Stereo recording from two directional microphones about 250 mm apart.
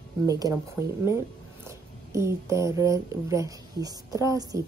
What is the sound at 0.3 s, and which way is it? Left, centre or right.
Speech, centre.